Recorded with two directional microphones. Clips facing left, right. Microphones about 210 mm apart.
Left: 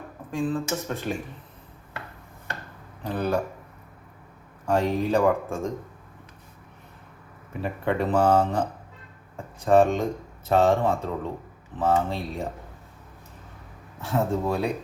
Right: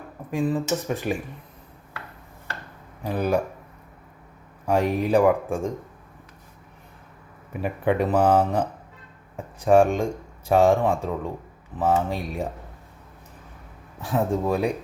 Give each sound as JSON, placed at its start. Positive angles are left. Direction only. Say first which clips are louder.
{"t": 0.3, "sound": "speech", "louder": "right 3 dB", "side_deg": -15}
{"t": 3.0, "sound": "speech", "louder": "right 2 dB", "side_deg": -10}
{"t": 4.6, "sound": "speech", "louder": "right 1 dB", "side_deg": -15}
{"t": 7.6, "sound": "speech", "louder": "right 3 dB", "side_deg": -10}
{"t": 9.6, "sound": "speech", "louder": "right 1 dB", "side_deg": -10}
{"t": 14.0, "sound": "speech", "louder": "right 1 dB", "side_deg": -15}